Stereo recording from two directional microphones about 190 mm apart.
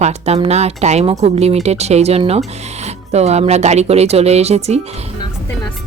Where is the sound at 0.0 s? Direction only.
35° right (ahead or behind).